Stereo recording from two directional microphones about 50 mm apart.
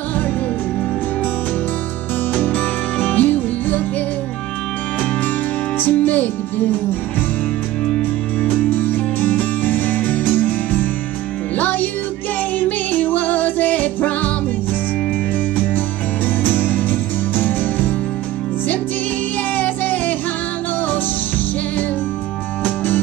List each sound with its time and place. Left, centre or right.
2.3 s music: left
5.8 s music: left
8.4 s music: left
8.6 s music: left
16.3 s music: left
19.5 s music: left